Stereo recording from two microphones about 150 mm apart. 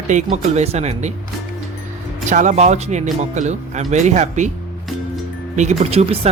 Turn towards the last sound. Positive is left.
turn(degrees=-40)  # may be behind; listen again after turning